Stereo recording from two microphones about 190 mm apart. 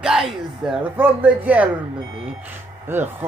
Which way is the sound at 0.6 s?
5° right (ahead or behind).